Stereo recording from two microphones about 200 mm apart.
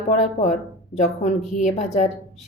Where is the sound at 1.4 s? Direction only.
Centre (ahead or behind).